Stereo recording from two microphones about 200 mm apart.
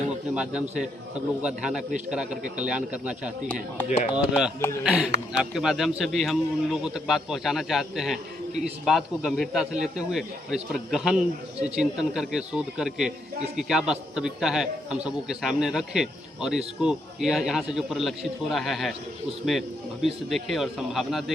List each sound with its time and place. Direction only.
0.3 s a man's voice: 5° right (ahead or behind)
3.8 s speech: 40° left (ahead or behind)
4.1 s a man's voice: 5° right (ahead or behind)